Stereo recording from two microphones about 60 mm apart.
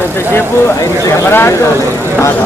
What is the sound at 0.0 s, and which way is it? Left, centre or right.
Vehicle, left.